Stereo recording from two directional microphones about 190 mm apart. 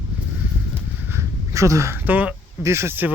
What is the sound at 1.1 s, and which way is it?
Speech, 15° right (ahead or behind).